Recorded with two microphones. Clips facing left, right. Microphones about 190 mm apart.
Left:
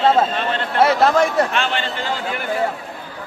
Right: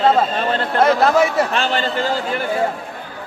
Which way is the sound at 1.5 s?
35° right (ahead or behind).